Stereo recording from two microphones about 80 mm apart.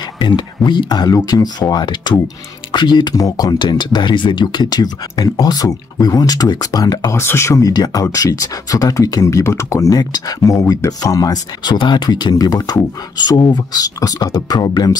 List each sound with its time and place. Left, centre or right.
0.2 s speech: left
3.6 s speech: left
7.1 s speech: left
7.7 s speech: left
11.6 s speech: left